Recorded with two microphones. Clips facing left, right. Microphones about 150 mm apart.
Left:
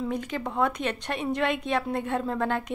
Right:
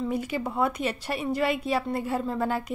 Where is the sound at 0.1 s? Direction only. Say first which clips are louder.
Right 1 dB; 10° right (ahead or behind).